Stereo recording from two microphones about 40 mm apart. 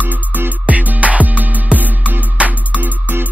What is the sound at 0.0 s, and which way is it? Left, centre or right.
Music, right.